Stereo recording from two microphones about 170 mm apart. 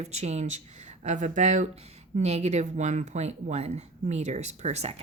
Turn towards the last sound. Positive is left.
turn(degrees=-40)  # may be behind; listen again after turning